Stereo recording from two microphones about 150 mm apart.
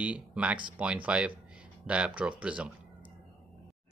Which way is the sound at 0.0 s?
10° right (ahead or behind).